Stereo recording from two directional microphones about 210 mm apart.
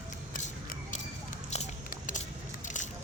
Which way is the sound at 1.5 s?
35° left (ahead or behind).